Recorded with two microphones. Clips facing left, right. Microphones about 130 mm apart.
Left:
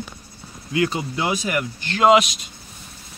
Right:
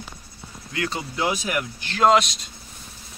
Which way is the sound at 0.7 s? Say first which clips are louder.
Left 7 dB; 15° left (ahead or behind).